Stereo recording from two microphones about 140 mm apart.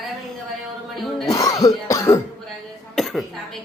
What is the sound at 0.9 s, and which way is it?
Music, centre (ahead or behind).